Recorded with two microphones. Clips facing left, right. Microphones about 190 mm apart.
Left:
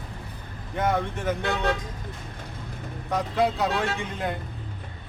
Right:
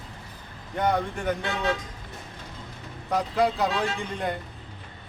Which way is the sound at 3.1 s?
Centre (ahead or behind).